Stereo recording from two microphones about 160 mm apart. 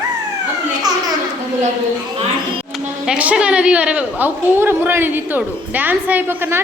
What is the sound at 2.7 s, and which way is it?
A woman's voice, 5° right (ahead or behind).